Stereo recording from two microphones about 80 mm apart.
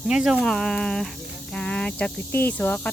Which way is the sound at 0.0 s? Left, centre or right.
Centre.